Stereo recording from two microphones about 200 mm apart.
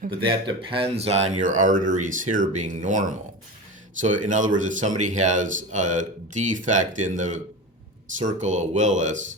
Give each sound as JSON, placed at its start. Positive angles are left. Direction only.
{"t": 0.3, "sound": "speech", "side_deg": -25}